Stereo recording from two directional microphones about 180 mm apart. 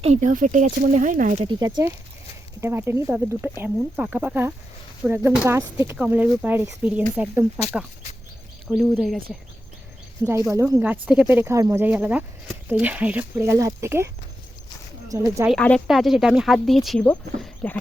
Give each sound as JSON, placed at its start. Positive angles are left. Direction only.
{"t": 0.0, "sound": "speech", "side_deg": -40}
{"t": 1.5, "sound": "speech", "side_deg": -25}
{"t": 8.7, "sound": "speech", "side_deg": -5}
{"t": 10.5, "sound": "speech", "side_deg": -15}
{"t": 15.1, "sound": "speech", "side_deg": -20}
{"t": 15.4, "sound": "speech", "side_deg": 5}